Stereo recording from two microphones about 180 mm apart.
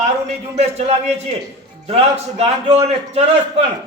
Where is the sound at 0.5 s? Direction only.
35° right (ahead or behind).